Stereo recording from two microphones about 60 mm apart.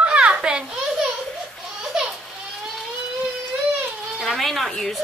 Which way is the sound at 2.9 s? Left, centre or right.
Centre.